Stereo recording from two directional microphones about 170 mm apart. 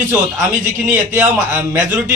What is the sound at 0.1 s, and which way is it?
A man's voice, 15° right (ahead or behind).